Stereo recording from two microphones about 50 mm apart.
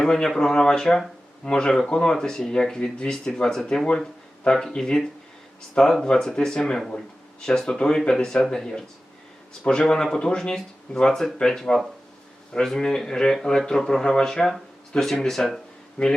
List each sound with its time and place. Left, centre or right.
0.0 s speech: centre
16.0 s speech: centre